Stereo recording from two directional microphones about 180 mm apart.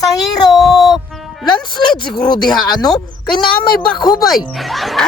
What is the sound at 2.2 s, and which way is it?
Speech, 25° left (ahead or behind).